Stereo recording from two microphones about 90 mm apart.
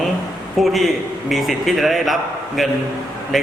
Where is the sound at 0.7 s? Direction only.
Centre (ahead or behind).